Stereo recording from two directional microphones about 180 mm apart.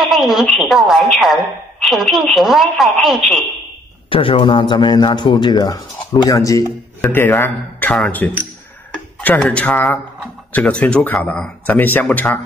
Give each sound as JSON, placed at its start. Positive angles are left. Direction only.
{"t": 0.0, "sound": "a woman's voice", "side_deg": 0}
{"t": 4.1, "sound": "a man's voice", "side_deg": 30}